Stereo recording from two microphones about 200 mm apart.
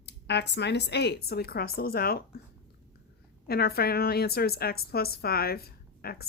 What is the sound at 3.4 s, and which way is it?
A woman's voice, 50° left (ahead or behind).